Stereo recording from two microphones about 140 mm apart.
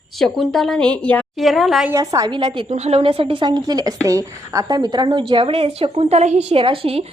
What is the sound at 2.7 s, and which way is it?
Speech, 50° right (ahead or behind).